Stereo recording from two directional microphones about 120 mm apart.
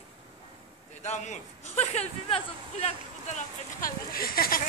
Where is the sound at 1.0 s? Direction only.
75° left (ahead or behind).